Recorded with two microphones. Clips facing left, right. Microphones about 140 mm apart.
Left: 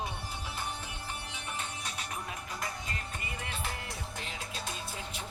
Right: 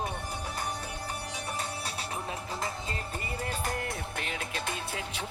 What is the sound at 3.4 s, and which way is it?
Music, 40° right (ahead or behind).